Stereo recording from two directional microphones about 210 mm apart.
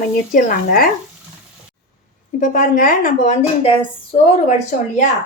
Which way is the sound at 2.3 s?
40° left (ahead or behind).